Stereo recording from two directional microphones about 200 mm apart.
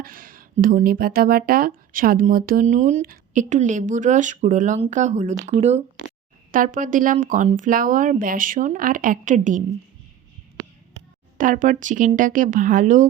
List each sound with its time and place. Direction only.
0.0 s speech: 45° right (ahead or behind)
11.3 s speech: 40° right (ahead or behind)